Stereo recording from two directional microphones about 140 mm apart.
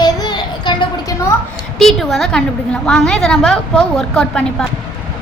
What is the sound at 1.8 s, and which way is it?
A woman's voice, centre (ahead or behind).